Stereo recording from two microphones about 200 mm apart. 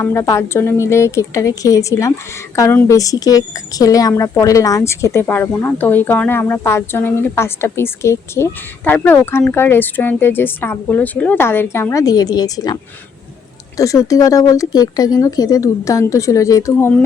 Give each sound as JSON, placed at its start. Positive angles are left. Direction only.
{"t": 0.0, "sound": "a woman's voice", "side_deg": 15}